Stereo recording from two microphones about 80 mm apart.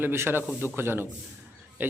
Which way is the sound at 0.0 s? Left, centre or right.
Right.